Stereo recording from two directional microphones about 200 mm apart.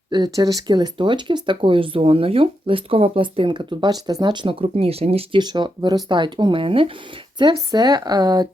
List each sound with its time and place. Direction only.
0.1 s speech: 20° right (ahead or behind)